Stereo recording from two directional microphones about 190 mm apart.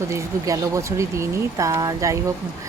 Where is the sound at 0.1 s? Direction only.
15° right (ahead or behind).